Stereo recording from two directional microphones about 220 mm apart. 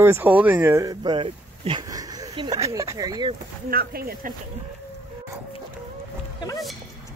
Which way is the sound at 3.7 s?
45° right (ahead or behind).